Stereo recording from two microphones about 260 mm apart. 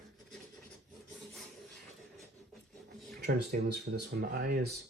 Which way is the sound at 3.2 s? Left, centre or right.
Right.